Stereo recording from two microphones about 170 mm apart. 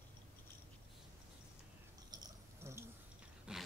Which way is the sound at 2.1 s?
15° right (ahead or behind).